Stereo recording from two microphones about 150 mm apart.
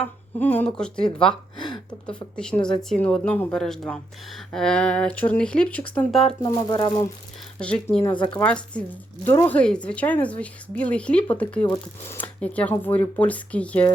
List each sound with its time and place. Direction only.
0.3 s speech: 10° left (ahead or behind)
6.4 s speech: 30° left (ahead or behind)
7.6 s speech: 10° left (ahead or behind)
8.1 s speech: 30° left (ahead or behind)
8.4 s speech: 10° left (ahead or behind)